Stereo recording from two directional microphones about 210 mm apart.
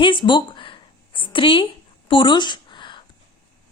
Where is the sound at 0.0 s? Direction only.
20° left (ahead or behind).